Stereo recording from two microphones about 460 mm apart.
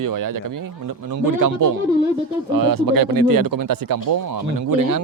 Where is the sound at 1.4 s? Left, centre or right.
Right.